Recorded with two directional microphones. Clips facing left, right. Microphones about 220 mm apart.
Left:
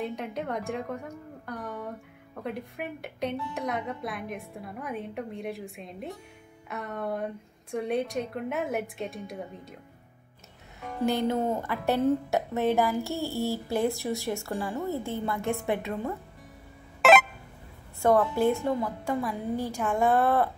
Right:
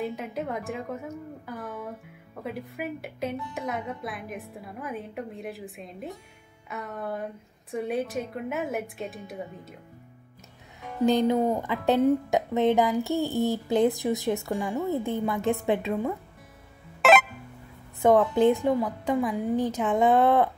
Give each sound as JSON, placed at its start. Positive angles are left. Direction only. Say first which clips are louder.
{"t": 0.0, "sound": "a woman's voice", "louder": "right 1 dB", "side_deg": 0}
{"t": 11.1, "sound": "speech", "louder": "right 4 dB", "side_deg": -15}
{"t": 17.0, "sound": "a sound", "louder": "even", "side_deg": 0}
{"t": 18.0, "sound": "a woman's voice", "louder": "right 3 dB", "side_deg": -20}